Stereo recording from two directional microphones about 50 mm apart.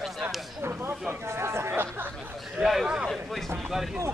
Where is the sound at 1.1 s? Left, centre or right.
Right.